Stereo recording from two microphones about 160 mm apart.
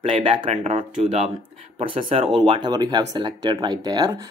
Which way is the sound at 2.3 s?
30° right (ahead or behind).